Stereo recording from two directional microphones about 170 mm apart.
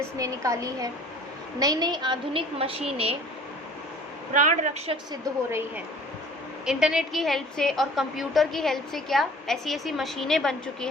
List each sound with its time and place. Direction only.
0.2 s a woman's voice: 20° right (ahead or behind); by 3.2 s 35° right (ahead or behind)
4.4 s a woman's voice: 45° right (ahead or behind)
5.5 s speech: 15° right (ahead or behind)
6.7 s a woman's voice: 5° right (ahead or behind)